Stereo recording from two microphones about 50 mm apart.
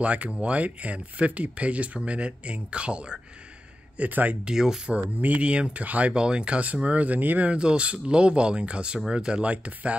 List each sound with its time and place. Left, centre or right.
0.0 s speech: right
4.0 s speech: right
4.5 s speech: centre
4.9 s speech: right
7.5 s speech: right